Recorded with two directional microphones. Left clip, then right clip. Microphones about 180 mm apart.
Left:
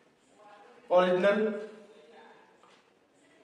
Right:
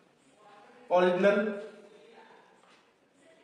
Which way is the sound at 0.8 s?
15° left (ahead or behind).